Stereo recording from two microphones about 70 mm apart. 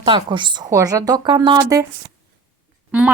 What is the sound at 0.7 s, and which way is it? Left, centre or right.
Speech, right.